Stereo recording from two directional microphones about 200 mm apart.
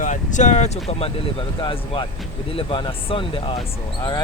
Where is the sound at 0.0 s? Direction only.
40° left (ahead or behind).